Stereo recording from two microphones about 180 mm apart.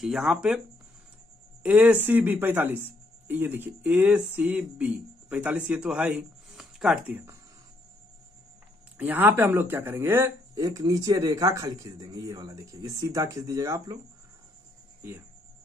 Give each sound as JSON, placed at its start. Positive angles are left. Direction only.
{"t": 0.0, "sound": "speech", "side_deg": -5}
{"t": 1.6, "sound": "speech", "side_deg": -5}
{"t": 8.9, "sound": "speech", "side_deg": -10}
{"t": 15.0, "sound": "speech", "side_deg": -10}